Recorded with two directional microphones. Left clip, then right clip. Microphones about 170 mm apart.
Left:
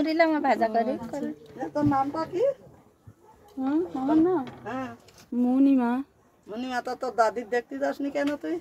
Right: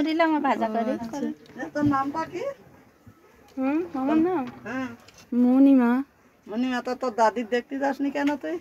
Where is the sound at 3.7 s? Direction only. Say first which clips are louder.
Left 1 dB; 30° right (ahead or behind).